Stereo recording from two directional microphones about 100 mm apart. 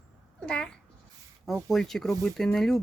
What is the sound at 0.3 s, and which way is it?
A child's voice, 10° left (ahead or behind).